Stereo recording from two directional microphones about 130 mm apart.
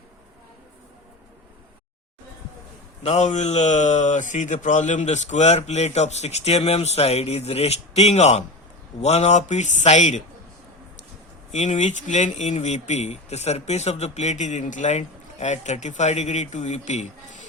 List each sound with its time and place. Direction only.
3.0 s speech: 60° left (ahead or behind)
11.5 s speech: 65° left (ahead or behind)